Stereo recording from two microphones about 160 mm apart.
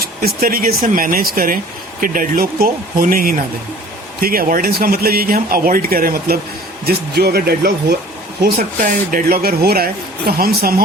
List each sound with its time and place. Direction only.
0.0 s speech: 70° right (ahead or behind)
6.8 s speech: 80° right
8.4 s speech: 65° right (ahead or behind)